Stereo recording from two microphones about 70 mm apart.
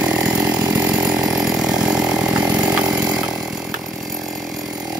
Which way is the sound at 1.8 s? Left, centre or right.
Centre.